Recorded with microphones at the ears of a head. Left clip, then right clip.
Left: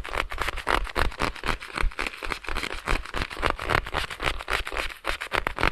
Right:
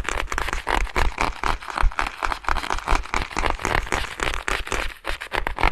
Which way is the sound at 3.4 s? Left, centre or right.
Centre.